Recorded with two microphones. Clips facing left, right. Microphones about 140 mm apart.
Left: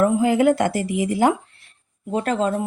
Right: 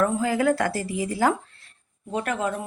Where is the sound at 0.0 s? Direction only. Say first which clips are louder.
Left 5 dB; 20° left (ahead or behind).